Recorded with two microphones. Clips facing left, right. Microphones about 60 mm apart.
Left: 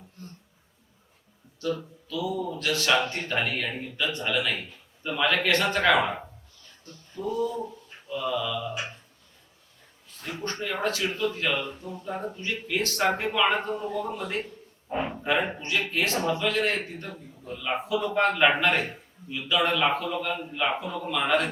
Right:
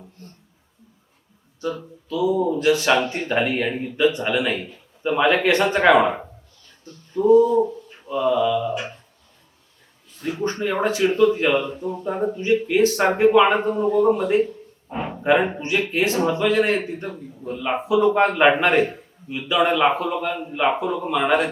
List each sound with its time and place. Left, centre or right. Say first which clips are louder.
2.0 s a man's voice: right 10 dB; right
8.3 s a man's voice: right 10 dB; right
10.2 s speech: right 9 dB; centre
10.4 s a man's voice: right 7 dB; centre
14.8 s a sound: right 1 dB; centre
15.2 s a man's voice: right 11 dB; right